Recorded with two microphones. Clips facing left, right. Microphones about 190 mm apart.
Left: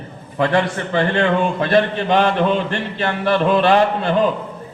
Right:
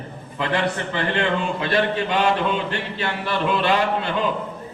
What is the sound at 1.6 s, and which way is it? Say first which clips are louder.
A man's voice: left 5 dB; 45° left (ahead or behind).